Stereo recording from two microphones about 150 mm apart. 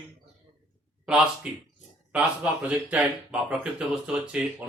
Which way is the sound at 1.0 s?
5° right (ahead or behind).